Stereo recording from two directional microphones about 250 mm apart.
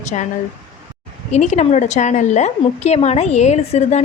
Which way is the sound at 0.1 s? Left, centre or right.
Left.